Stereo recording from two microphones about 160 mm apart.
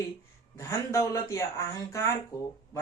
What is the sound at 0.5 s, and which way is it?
Speech, 20° left (ahead or behind).